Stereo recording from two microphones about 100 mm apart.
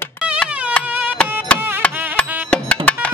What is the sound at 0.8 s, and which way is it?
Carnatic music, 10° left (ahead or behind).